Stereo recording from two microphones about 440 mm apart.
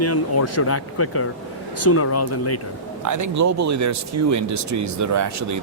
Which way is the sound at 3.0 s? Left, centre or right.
Right.